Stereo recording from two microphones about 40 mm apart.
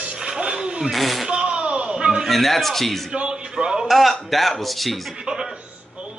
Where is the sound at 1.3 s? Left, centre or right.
Right.